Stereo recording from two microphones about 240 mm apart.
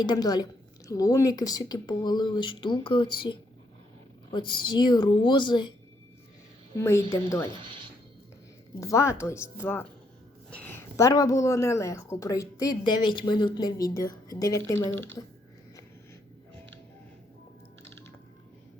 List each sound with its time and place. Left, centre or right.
0.0 s a woman's voice: centre
6.7 s speech: centre
8.8 s speech: centre